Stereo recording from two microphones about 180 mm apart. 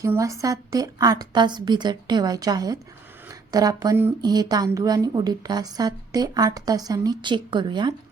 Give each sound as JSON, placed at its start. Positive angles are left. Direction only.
{"t": 0.0, "sound": "a woman's voice", "side_deg": -15}